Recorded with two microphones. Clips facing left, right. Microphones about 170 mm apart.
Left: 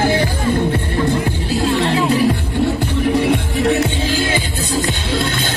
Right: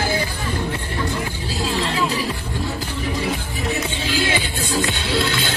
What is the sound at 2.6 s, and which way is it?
Music, 70° left (ahead or behind).